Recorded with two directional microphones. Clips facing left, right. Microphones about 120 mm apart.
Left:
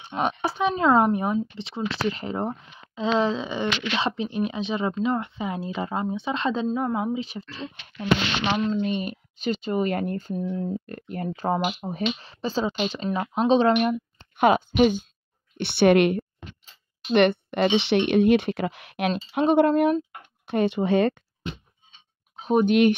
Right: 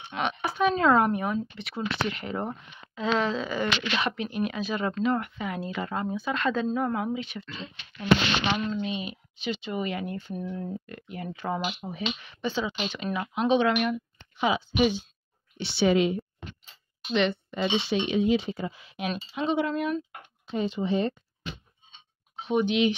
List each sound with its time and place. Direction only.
0.1 s a sound: 35° left (ahead or behind)
0.7 s speech: 20° left (ahead or behind)
7.2 s speech: 35° left (ahead or behind)
8.8 s speech: 45° left (ahead or behind)
14.3 s speech: 55° left (ahead or behind)
15.5 s speech: 60° left (ahead or behind)
20.4 s speech: 65° left (ahead or behind)
22.4 s speech: 45° left (ahead or behind)